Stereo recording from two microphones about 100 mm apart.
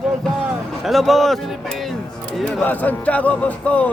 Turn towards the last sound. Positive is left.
turn(degrees=15)  # may be behind; listen again after turning